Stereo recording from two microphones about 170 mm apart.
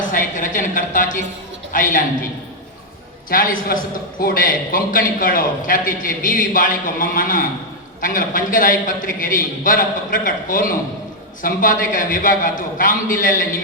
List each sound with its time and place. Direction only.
0.1 s a man's voice: 50° left (ahead or behind)
3.2 s a man's voice: 55° left (ahead or behind)